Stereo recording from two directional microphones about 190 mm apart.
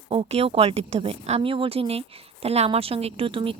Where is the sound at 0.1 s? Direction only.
30° right (ahead or behind).